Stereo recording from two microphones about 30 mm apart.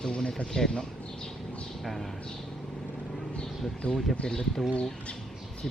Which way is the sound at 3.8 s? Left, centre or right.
Left.